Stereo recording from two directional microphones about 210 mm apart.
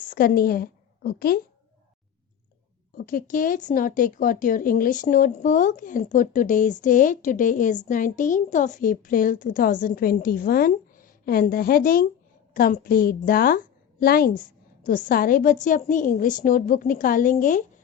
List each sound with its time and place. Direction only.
0.1 s a woman's voice: 45° left (ahead or behind)
2.9 s a woman's voice: 40° left (ahead or behind)